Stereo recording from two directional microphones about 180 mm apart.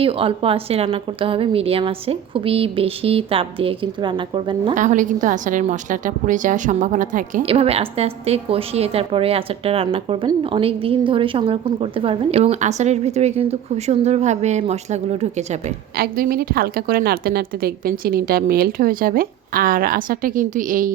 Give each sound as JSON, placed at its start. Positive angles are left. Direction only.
{"t": 0.0, "sound": "a woman's voice", "side_deg": -30}
{"t": 4.7, "sound": "a woman's voice", "side_deg": -45}
{"t": 7.4, "sound": "a woman's voice", "side_deg": -35}
{"t": 16.0, "sound": "a woman's voice", "side_deg": -55}